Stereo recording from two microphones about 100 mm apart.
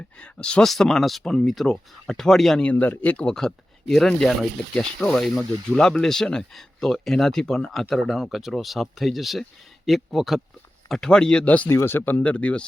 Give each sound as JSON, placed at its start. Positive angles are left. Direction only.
{"t": 0.2, "sound": "speech", "side_deg": 10}